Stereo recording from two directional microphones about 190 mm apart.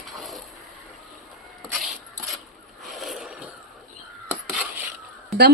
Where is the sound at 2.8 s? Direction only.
Centre (ahead or behind).